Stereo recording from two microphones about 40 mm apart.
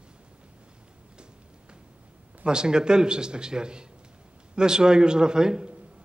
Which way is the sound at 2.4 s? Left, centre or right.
Right.